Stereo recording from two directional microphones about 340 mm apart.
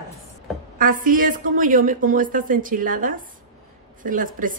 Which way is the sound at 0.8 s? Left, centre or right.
Right.